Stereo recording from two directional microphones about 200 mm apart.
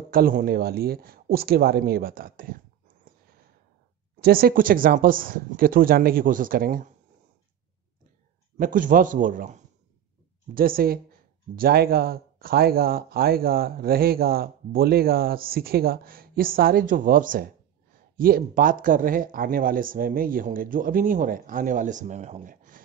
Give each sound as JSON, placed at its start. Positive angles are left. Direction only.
{"t": 0.1, "sound": "speech", "side_deg": -45}
{"t": 4.2, "sound": "speech", "side_deg": -50}
{"t": 8.5, "sound": "a man's voice", "side_deg": -40}